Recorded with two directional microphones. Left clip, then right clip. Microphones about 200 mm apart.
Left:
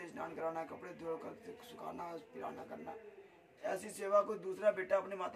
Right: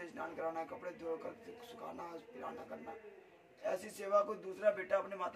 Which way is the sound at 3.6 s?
20° left (ahead or behind).